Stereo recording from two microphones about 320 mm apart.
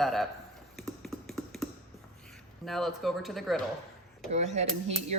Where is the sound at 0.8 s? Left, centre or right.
Centre.